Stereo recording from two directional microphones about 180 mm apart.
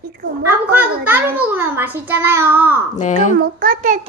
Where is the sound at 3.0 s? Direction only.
40° left (ahead or behind).